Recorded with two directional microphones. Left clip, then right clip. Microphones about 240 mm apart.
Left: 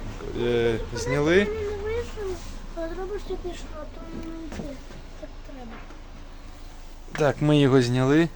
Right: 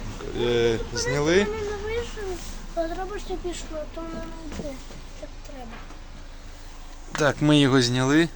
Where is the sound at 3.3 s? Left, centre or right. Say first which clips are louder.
Right 1 dB; right.